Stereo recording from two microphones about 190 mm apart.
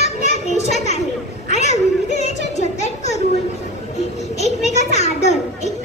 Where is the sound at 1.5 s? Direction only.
35° left (ahead or behind).